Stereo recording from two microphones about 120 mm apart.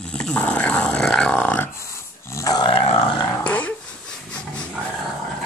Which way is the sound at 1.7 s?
25° left (ahead or behind).